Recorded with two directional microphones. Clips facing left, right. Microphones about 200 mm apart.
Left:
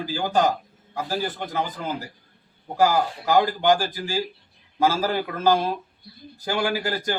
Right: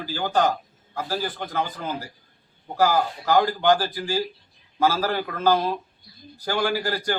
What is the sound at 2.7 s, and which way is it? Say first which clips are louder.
A man's voice: left 1 dB; 15° left (ahead or behind).